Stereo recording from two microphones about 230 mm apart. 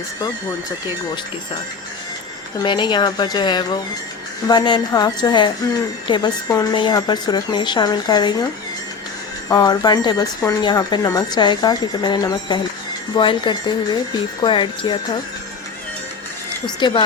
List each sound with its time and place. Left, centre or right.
2.6 s a woman's voice: centre
9.5 s a woman's voice: centre
16.6 s a woman's voice: centre